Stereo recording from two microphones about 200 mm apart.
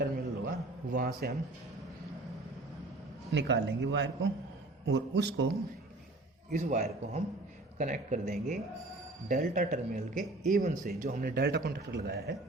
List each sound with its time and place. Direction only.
0.0 s a sound: 45° right (ahead or behind)
3.3 s speech: 60° right (ahead or behind)
6.5 s speech: 35° right (ahead or behind); by 12.4 s 55° right (ahead or behind)